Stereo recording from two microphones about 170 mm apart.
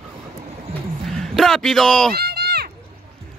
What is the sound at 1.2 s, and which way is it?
Speech, centre (ahead or behind).